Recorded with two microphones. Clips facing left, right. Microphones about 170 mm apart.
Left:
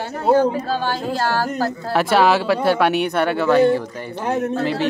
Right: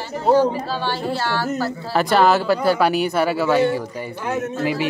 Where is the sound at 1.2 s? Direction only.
40° left (ahead or behind).